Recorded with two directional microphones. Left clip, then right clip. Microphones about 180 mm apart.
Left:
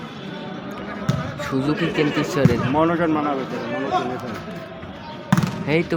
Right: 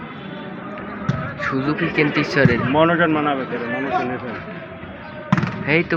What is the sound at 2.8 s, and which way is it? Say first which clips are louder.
Speech: right 4 dB; 35° right (ahead or behind).